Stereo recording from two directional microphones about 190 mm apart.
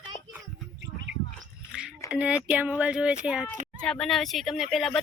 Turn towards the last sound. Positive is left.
turn(degrees=0)  # may be behind; listen again after turning